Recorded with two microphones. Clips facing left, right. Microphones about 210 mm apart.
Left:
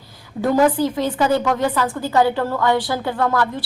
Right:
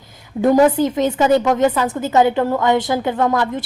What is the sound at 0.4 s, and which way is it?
A woman's voice, 20° right (ahead or behind).